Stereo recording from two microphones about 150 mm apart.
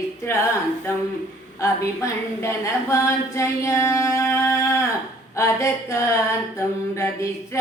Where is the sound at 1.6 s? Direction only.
20° left (ahead or behind).